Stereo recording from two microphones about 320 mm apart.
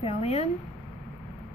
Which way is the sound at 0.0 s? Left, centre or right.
Centre.